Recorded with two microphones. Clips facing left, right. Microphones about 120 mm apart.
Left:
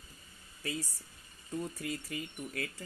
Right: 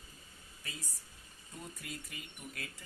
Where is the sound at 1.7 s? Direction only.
55° left (ahead or behind).